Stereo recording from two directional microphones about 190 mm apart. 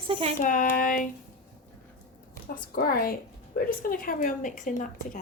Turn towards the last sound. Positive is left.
turn(degrees=40)  # may be behind; listen again after turning